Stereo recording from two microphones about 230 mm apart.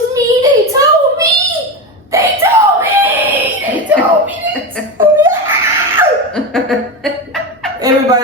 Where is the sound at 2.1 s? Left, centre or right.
Centre.